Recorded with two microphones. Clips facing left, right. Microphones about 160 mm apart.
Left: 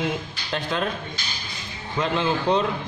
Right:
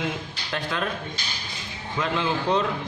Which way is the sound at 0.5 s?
25° left (ahead or behind).